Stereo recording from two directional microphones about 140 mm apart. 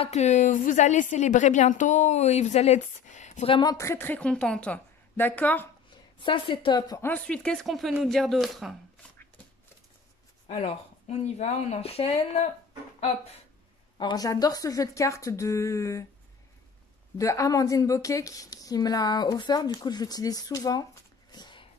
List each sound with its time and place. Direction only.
0.0 s a woman's voice: 55° left (ahead or behind)
3.4 s a woman's voice: 35° left (ahead or behind)
3.7 s a woman's voice: 20° left (ahead or behind)
6.1 s a woman's voice: 35° left (ahead or behind)
7.0 s a woman's voice: 10° left (ahead or behind)
10.5 s speech: 50° left (ahead or behind)
13.9 s a woman's voice: 30° left (ahead or behind)
17.2 s a woman's voice: 20° left (ahead or behind)